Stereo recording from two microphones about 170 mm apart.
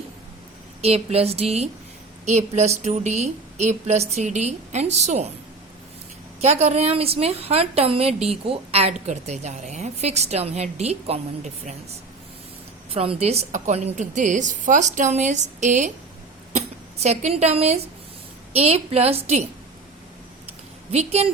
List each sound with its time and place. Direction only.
0.8 s a woman's voice: 40° right (ahead or behind)
6.4 s a woman's voice: 40° right (ahead or behind)
12.9 s a woman's voice: 35° right (ahead or behind)
20.9 s a woman's voice: 40° right (ahead or behind)